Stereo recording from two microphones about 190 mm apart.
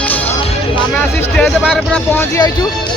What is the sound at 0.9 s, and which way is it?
Speech, 5° left (ahead or behind).